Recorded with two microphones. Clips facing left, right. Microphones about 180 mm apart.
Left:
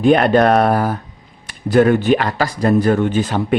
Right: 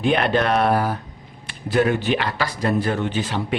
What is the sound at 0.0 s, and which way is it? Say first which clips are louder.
Speech: left 7 dB; 45° left (ahead or behind).